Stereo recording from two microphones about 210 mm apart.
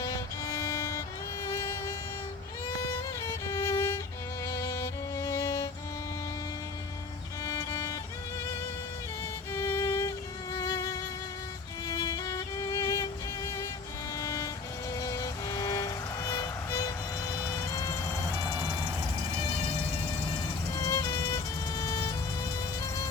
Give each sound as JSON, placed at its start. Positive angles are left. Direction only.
{"t": 0.0, "sound": "violin", "side_deg": 15}
{"t": 1.5, "sound": "music", "side_deg": 15}
{"t": 3.5, "sound": "violin", "side_deg": 15}
{"t": 4.4, "sound": "music", "side_deg": 15}
{"t": 7.4, "sound": "music", "side_deg": 15}
{"t": 9.5, "sound": "music", "side_deg": 15}
{"t": 14.9, "sound": "vehicle", "side_deg": 15}
{"t": 20.7, "sound": "music", "side_deg": 15}